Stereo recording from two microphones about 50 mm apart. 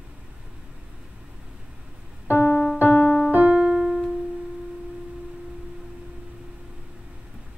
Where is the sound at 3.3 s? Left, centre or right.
Right.